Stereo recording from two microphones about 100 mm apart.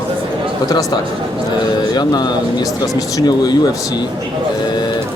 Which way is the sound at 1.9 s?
45° left (ahead or behind).